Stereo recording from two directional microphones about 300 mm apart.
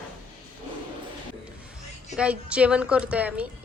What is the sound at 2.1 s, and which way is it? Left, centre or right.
A woman's voice, centre.